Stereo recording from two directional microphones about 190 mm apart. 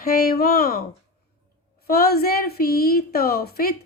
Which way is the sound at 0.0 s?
50° left (ahead or behind).